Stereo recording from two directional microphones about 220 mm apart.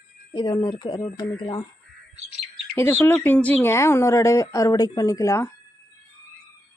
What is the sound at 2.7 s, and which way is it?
A woman's voice, 10° left (ahead or behind).